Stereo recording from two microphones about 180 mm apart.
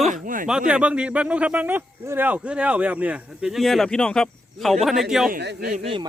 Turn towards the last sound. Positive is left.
turn(degrees=-30)  # may be behind; listen again after turning